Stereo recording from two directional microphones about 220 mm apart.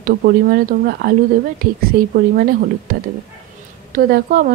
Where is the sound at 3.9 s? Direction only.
40° right (ahead or behind).